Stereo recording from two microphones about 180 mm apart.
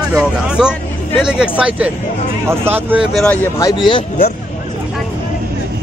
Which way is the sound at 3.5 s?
20° left (ahead or behind).